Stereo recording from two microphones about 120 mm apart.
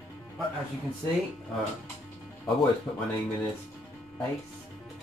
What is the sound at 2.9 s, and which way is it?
Speech, 15° left (ahead or behind).